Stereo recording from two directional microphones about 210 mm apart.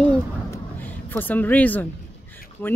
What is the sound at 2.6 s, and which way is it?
Speech, 10° left (ahead or behind).